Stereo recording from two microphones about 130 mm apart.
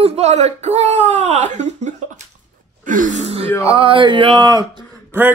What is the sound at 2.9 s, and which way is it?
Speech, 85° right.